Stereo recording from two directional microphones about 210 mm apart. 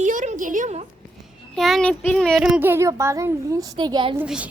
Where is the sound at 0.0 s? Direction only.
35° right (ahead or behind).